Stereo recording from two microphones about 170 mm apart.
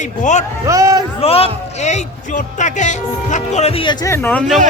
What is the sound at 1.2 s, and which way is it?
Speech, 35° left (ahead or behind).